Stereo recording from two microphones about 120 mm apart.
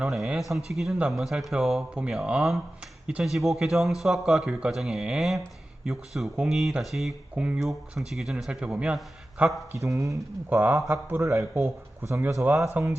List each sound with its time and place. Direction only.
0.0 s speech: centre (ahead or behind)
9.7 s speech: 25° right (ahead or behind)